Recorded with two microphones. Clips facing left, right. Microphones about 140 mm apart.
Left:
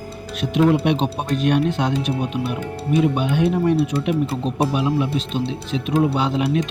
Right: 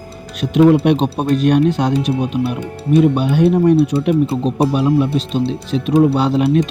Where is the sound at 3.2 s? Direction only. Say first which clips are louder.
Right 6 dB; 40° right (ahead or behind).